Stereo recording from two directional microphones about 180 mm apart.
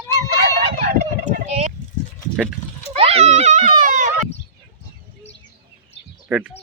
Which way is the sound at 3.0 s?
35° right (ahead or behind).